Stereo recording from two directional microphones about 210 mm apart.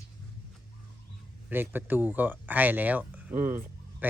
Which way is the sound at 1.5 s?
10° right (ahead or behind).